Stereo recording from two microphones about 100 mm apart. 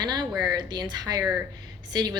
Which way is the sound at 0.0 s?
45° right (ahead or behind).